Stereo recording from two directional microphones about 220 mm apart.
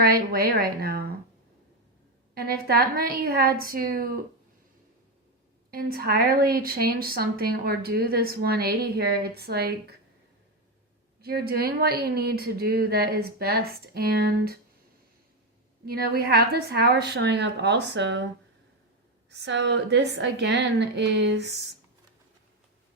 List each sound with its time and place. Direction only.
0.0 s a woman's voice: 45° right (ahead or behind)
2.3 s a woman's voice: 45° right (ahead or behind)
5.7 s a woman's voice: 45° right (ahead or behind)
11.2 s a woman's voice: 45° right (ahead or behind)
15.9 s a woman's voice: 45° right (ahead or behind)
19.3 s a woman's voice: 50° right (ahead or behind)